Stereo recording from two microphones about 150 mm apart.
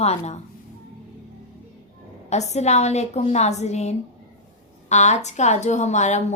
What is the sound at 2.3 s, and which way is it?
Speech, 50° left (ahead or behind).